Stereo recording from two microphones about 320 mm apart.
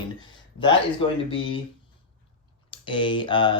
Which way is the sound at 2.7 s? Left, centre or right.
Centre.